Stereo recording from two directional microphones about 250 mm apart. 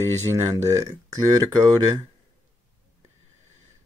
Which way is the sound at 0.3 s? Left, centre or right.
Centre.